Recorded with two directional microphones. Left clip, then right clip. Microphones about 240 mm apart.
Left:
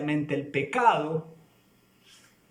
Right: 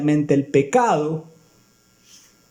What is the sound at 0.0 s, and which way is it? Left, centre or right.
Speech, right.